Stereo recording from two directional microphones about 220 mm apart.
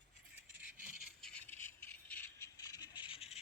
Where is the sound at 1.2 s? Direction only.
5° left (ahead or behind).